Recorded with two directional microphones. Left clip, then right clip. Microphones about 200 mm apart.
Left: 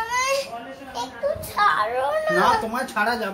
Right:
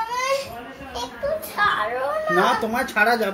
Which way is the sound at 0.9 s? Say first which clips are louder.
Even; 10° right (ahead or behind).